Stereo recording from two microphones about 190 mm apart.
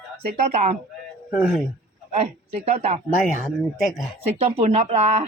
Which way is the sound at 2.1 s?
35° right (ahead or behind).